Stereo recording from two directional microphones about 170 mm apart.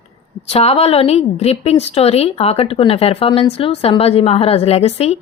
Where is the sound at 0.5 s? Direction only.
35° left (ahead or behind).